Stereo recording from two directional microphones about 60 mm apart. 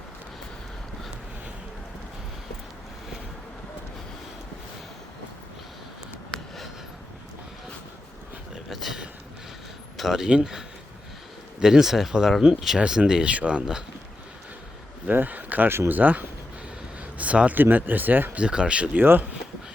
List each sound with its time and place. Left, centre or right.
8.7 s a sound: centre
10.0 s speech: centre
11.6 s speech: centre
15.0 s speech: right
18.3 s speech: centre
18.9 s speech: right